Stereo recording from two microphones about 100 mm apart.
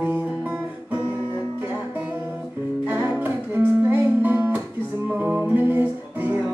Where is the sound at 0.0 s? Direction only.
15° right (ahead or behind).